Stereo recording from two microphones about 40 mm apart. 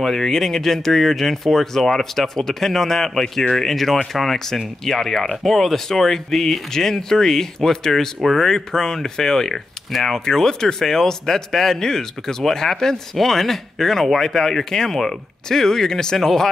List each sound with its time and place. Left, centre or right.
0.0 s speech: centre
8.5 s speech: centre